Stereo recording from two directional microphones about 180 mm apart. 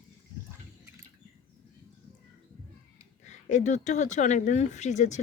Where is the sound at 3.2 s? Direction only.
45° left (ahead or behind).